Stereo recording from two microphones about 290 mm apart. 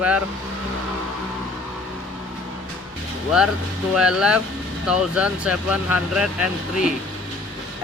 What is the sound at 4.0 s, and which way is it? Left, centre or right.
Speech, centre.